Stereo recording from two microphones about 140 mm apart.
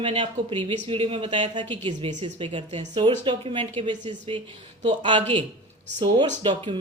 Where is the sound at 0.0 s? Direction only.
40° right (ahead or behind).